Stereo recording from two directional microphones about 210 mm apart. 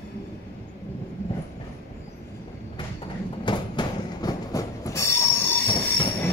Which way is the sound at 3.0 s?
20° left (ahead or behind).